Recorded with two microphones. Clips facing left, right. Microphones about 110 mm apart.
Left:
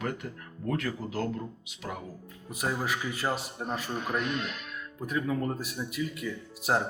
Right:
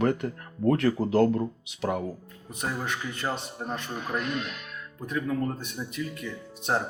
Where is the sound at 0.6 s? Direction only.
45° right (ahead or behind).